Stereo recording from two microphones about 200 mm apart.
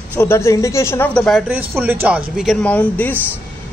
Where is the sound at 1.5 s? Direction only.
10° right (ahead or behind); by 3.1 s 10° left (ahead or behind).